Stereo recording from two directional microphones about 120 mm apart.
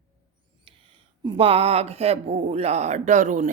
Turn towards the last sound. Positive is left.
turn(degrees=-80)